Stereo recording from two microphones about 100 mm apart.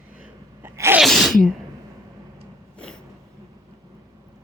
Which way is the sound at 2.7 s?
10° left (ahead or behind).